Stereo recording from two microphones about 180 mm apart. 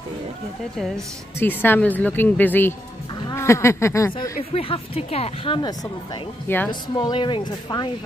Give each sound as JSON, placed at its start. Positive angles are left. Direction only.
{"t": 0.7, "sound": "a woman's voice", "side_deg": 0}
{"t": 4.4, "sound": "a woman's voice", "side_deg": 35}
{"t": 6.4, "sound": "a woman's voice", "side_deg": 10}
{"t": 6.7, "sound": "speech", "side_deg": 25}